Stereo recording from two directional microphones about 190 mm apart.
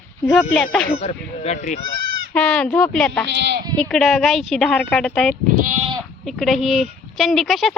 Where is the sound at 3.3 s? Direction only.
65° right (ahead or behind).